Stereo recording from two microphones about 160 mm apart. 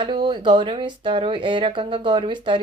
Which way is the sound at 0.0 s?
30° right (ahead or behind).